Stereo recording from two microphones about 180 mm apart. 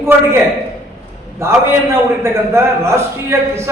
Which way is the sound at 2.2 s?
15° right (ahead or behind).